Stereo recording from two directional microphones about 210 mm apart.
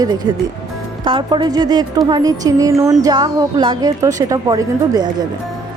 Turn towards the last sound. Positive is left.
turn(degrees=-20)  # may be behind; listen again after turning